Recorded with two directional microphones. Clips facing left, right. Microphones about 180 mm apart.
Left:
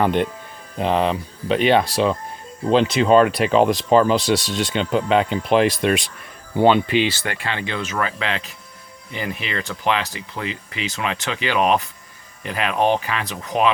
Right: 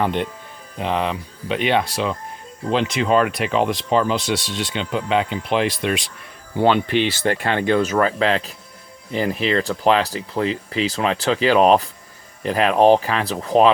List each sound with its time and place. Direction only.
0.0 s speech: 50° left (ahead or behind)
0.8 s speech: 35° left (ahead or behind)
6.6 s speech: 10° left (ahead or behind)
7.3 s speech: 45° right (ahead or behind)